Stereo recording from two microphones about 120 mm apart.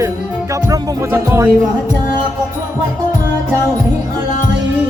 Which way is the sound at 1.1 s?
20° right (ahead or behind).